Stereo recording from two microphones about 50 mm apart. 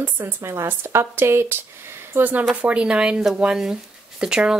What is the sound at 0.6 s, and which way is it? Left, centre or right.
Speech, right.